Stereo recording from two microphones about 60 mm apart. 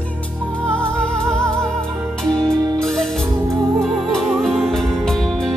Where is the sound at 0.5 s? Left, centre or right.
Centre.